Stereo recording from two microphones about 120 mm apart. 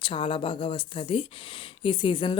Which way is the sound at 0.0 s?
45° left (ahead or behind).